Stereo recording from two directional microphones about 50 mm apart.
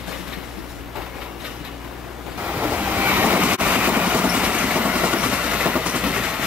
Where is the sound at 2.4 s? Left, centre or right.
Right.